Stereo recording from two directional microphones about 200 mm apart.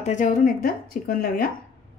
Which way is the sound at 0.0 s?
40° left (ahead or behind).